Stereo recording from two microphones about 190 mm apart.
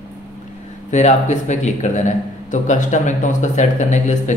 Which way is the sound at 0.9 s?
40° left (ahead or behind).